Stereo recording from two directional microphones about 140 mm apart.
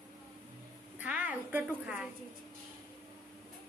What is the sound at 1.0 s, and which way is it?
A woman's voice, 10° right (ahead or behind).